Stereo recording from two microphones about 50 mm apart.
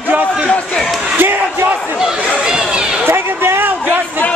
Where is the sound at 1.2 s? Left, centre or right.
Right.